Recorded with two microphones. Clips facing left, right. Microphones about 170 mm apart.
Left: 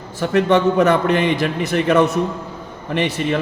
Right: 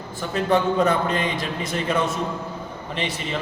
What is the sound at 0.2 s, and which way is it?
A man's voice, 75° left (ahead or behind).